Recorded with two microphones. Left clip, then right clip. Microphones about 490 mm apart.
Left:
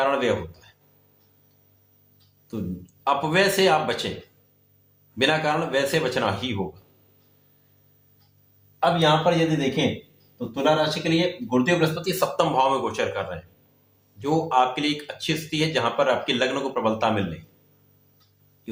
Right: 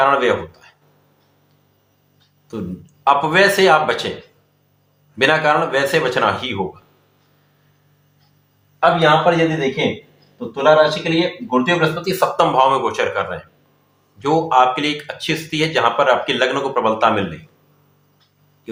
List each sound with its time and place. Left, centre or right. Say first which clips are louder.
0.0 s speech: right 8 dB; left
2.5 s speech: right 5 dB; left
5.1 s speech: right 8 dB; left
8.8 s speech: right 7 dB; left